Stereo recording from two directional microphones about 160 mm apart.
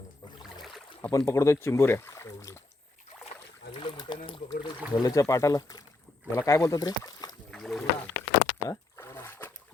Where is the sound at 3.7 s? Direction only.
30° left (ahead or behind).